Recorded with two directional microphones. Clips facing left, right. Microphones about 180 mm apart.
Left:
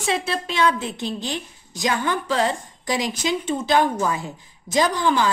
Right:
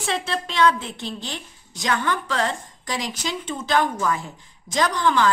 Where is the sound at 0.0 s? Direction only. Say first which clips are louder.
Left 2 dB; 10° left (ahead or behind).